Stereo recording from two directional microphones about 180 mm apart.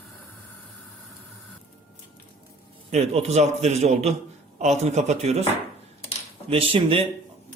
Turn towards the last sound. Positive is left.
turn(degrees=-30)  # may be behind; listen again after turning